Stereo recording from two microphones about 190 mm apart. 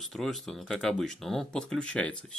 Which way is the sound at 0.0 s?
Centre (ahead or behind).